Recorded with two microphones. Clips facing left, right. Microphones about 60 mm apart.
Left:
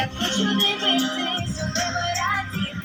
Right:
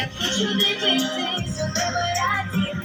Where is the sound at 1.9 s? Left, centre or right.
Centre.